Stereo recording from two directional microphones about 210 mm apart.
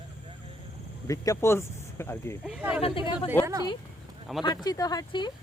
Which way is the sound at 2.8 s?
25° left (ahead or behind).